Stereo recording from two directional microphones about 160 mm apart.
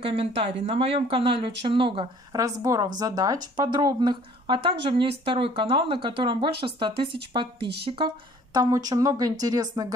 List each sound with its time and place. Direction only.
0.0 s speech: 35° right (ahead or behind)
2.3 s a woman's voice: 20° right (ahead or behind)
8.5 s a woman's voice: 25° right (ahead or behind)